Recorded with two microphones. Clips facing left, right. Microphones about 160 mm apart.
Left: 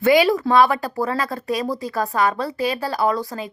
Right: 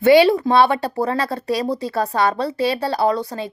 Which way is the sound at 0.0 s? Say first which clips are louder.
Right 4 dB; 30° right (ahead or behind).